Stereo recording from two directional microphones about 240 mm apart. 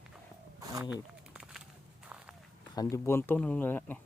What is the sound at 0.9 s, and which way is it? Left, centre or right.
Walk, centre.